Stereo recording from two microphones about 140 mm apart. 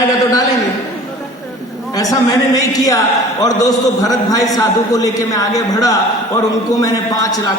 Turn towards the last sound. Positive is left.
turn(degrees=25)  # may be behind; listen again after turning